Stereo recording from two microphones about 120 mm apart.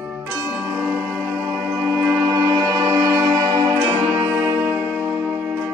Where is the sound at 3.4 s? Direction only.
40° right (ahead or behind).